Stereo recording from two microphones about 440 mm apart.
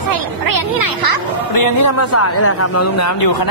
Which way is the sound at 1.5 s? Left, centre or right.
Left.